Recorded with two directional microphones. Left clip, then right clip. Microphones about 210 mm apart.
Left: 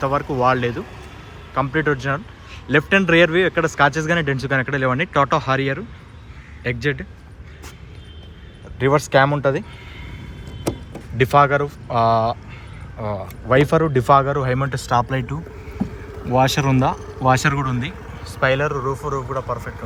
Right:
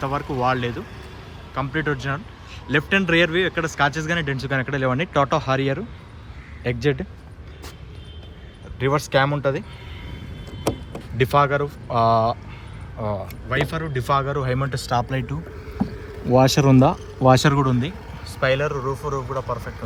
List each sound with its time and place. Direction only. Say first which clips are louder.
0.0 s speech: left 4 dB; centre (ahead or behind)
8.8 s speech: left 4 dB; 5° right (ahead or behind)
10.9 s speech: left 4 dB; 5° right (ahead or behind)
13.5 s speech: left 9 dB; 5° left (ahead or behind)
16.3 s speech: right 1 dB; 15° right (ahead or behind)
18.3 s speech: left 2 dB; 5° right (ahead or behind)